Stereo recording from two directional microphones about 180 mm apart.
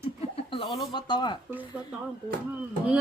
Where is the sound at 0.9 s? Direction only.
25° left (ahead or behind).